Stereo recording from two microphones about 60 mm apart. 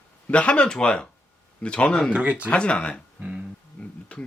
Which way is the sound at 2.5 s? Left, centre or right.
Centre.